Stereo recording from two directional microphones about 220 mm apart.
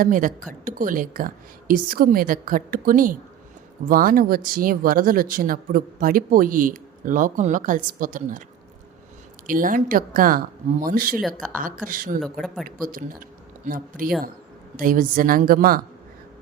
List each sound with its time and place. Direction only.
0.0 s speech: 35° right (ahead or behind)
9.5 s speech: 40° right (ahead or behind)
12.2 s speech: centre (ahead or behind)
12.6 s speech: 40° right (ahead or behind)